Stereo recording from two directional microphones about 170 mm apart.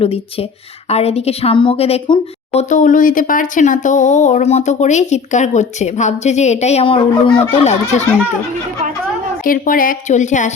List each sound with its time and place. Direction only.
0.0 s a woman's voice: 35° left (ahead or behind)
9.4 s a woman's voice: 55° left (ahead or behind)